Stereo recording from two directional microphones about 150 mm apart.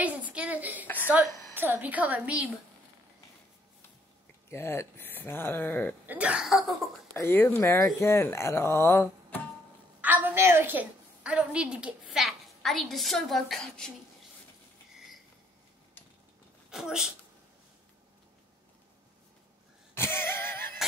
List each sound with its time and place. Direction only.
0.0 s a sound: 10° right (ahead or behind)
1.0 s a woman's voice: 10° right (ahead or behind)
4.5 s speech: 15° left (ahead or behind)
6.0 s speech: 10° right (ahead or behind)
7.2 s speech: 15° left (ahead or behind)
10.0 s a woman's voice: 10° right (ahead or behind); by 13.9 s 5° left (ahead or behind)
16.7 s speech: 5° right (ahead or behind)
19.9 s a sound: 15° left (ahead or behind)